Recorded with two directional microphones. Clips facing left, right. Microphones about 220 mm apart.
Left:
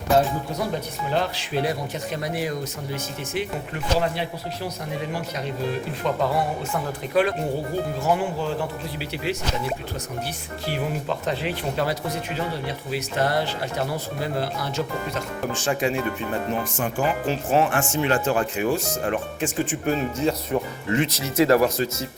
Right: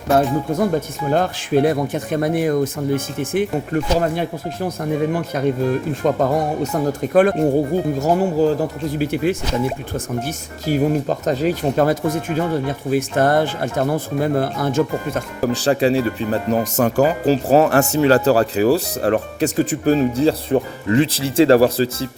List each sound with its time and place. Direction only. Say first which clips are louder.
0.5 s speech: right 8 dB; 50° right (ahead or behind)
15.4 s speech: right 9 dB; 35° right (ahead or behind)